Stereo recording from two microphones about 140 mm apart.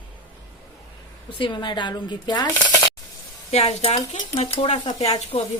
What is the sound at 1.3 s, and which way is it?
A woman's voice, 35° left (ahead or behind).